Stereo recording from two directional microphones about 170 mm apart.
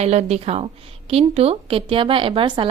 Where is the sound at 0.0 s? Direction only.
40° right (ahead or behind).